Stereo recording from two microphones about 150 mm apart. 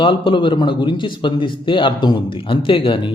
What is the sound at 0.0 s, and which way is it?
A man's voice, 35° left (ahead or behind).